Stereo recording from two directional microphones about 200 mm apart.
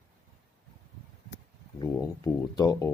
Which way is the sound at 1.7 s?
15° left (ahead or behind).